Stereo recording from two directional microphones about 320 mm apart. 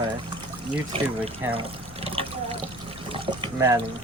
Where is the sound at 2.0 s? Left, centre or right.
Centre.